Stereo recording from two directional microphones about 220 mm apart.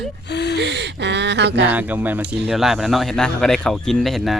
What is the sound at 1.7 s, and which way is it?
Speech, 10° right (ahead or behind).